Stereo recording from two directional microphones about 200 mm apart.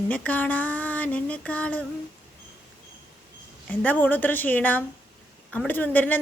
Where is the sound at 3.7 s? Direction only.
10° left (ahead or behind).